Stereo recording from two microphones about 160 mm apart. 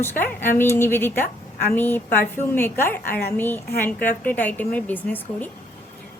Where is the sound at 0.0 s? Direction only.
15° left (ahead or behind).